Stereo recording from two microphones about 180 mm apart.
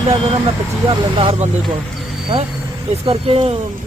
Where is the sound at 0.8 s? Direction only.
30° right (ahead or behind).